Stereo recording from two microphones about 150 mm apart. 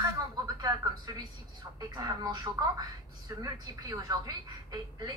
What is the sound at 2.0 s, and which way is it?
A woman's voice, 25° right (ahead or behind).